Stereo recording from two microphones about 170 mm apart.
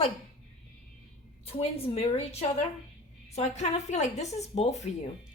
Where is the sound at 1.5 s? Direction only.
35° left (ahead or behind).